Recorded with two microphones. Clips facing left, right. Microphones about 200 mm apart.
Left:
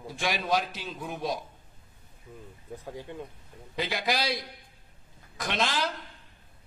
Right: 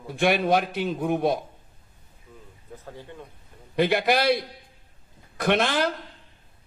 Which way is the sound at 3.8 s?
60° right (ahead or behind).